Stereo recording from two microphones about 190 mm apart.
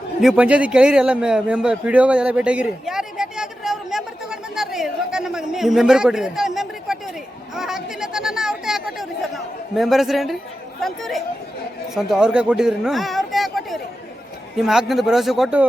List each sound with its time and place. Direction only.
0.2 s a man's voice: 5° right (ahead or behind)